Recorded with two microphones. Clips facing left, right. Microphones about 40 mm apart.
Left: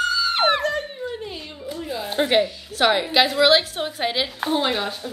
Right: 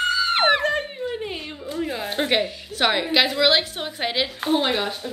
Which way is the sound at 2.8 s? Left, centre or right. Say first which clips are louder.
Left 2 dB; centre.